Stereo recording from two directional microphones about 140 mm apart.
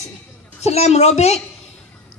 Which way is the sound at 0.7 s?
50° left (ahead or behind).